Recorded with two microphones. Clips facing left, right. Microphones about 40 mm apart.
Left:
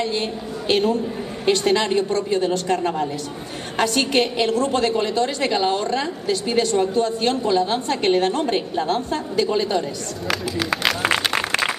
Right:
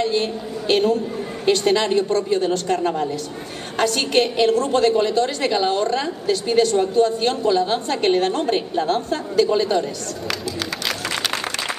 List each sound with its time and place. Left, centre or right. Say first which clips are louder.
0.0 s a woman's voice: right 3 dB; centre
11.2 s applause: left 4 dB; left